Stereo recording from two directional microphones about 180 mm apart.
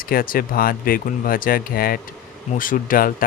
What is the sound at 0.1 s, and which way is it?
Speech, 55° left (ahead or behind).